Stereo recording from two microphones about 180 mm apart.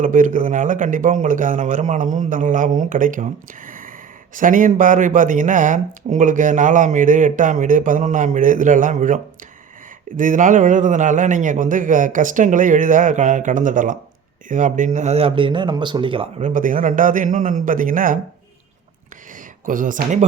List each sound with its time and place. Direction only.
0.0 s speech: 45° right (ahead or behind)
3.7 s a sound: 50° right (ahead or behind)
4.4 s a man's voice: 45° right (ahead or behind); by 16.3 s 30° right (ahead or behind)
16.4 s speech: 45° right (ahead or behind)
19.6 s speech: 50° right (ahead or behind)